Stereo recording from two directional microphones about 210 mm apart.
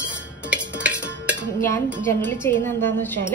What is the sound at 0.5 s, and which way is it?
Music, 5° right (ahead or behind).